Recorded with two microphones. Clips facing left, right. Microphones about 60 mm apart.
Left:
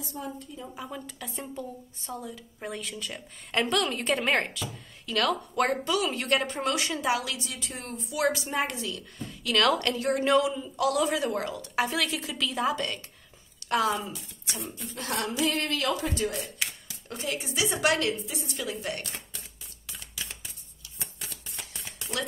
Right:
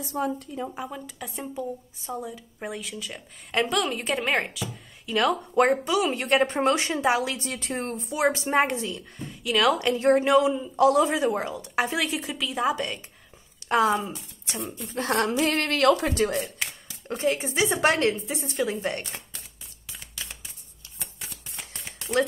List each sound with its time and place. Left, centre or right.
0.0 s a woman's voice: right
0.8 s a woman's voice: centre
2.7 s a woman's voice: centre
5.0 s speech: centre
7.3 s a woman's voice: right
8.6 s speech: right
9.5 s a woman's voice: centre
9.9 s a woman's voice: right
12.4 s a woman's voice: centre; by 14.6 s right
15.1 s speech: right
17.1 s a woman's voice: right